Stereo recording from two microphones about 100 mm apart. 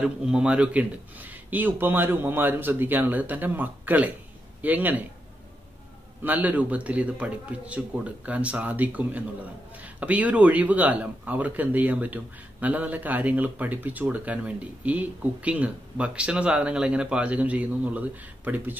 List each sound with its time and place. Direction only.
0.0 s a man's voice: 10° right (ahead or behind)
6.2 s speech: 15° right (ahead or behind)